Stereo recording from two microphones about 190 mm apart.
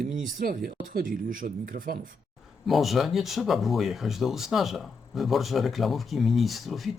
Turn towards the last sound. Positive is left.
turn(degrees=0)  # may be behind; listen again after turning